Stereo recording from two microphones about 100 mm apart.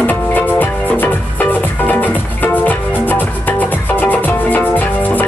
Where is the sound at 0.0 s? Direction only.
20° left (ahead or behind).